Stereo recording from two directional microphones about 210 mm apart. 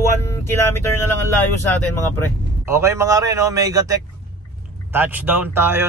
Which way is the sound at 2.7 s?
15° right (ahead or behind).